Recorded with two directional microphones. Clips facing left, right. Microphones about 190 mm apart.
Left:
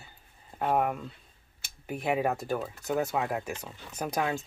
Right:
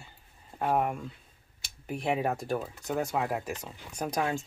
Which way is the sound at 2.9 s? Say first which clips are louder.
Left 1 dB; 5° left (ahead or behind).